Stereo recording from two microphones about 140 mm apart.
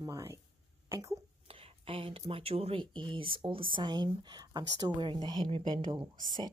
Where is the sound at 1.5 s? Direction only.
40° right (ahead or behind).